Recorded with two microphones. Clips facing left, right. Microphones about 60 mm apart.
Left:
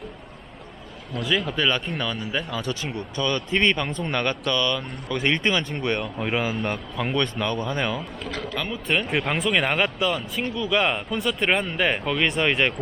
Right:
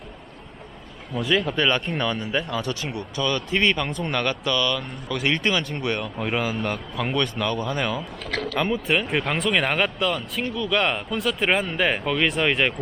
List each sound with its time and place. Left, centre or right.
1.3 s speech: centre
7.4 s speech: left
7.8 s speech: centre
8.5 s speech: right
8.9 s speech: centre